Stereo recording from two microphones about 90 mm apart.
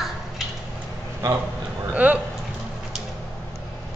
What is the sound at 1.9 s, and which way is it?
Speech, 20° right (ahead or behind).